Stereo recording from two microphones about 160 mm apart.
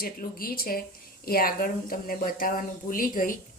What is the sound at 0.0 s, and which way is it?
Speech, 65° left (ahead or behind).